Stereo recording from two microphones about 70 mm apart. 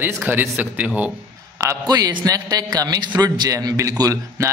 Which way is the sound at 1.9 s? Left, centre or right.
Right.